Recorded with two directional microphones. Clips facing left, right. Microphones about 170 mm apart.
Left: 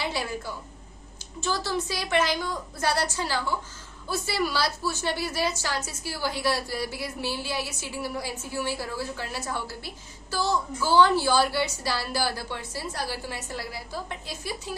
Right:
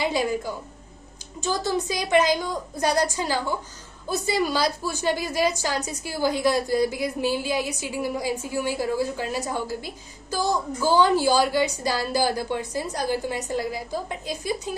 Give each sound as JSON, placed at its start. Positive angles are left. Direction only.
{"t": 0.0, "sound": "a woman's voice", "side_deg": -15}